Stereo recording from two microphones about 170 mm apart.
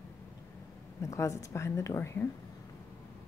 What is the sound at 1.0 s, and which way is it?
A woman's voice, 20° left (ahead or behind).